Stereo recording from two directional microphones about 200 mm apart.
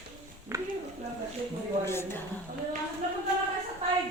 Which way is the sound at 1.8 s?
10° left (ahead or behind).